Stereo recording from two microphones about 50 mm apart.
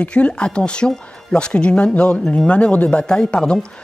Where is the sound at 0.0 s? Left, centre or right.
Left.